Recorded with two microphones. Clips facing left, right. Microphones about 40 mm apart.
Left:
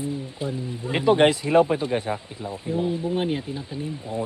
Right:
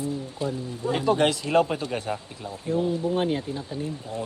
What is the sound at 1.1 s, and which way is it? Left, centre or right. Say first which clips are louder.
Speech: left 5 dB; left.